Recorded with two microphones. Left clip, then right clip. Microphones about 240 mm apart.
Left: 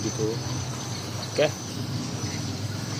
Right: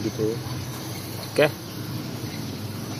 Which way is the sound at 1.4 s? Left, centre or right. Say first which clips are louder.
Right 3 dB; right.